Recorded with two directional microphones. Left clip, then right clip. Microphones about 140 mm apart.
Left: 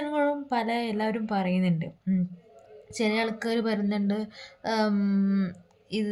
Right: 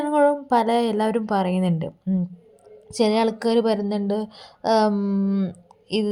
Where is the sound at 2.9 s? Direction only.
45° right (ahead or behind).